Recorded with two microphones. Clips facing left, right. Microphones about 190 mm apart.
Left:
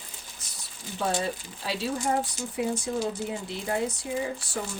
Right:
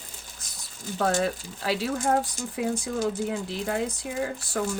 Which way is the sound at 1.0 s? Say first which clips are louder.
Right 3 dB; 90° right.